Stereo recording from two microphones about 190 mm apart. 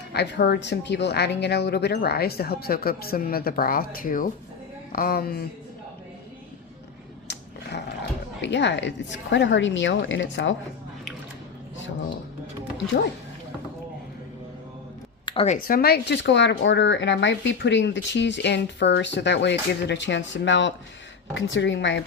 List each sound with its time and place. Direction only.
0.1 s speech: 60° left (ahead or behind)
7.3 s a sound: 65° left (ahead or behind)
8.4 s speech: 70° left (ahead or behind)
15.3 s speech: 30° left (ahead or behind)
15.6 s speech: 55° left (ahead or behind); by 22.0 s 70° left (ahead or behind)